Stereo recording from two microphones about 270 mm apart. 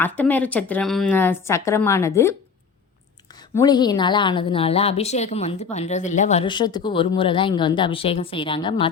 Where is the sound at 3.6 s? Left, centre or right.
Centre.